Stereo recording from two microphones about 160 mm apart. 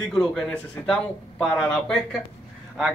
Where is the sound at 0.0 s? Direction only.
5° left (ahead or behind).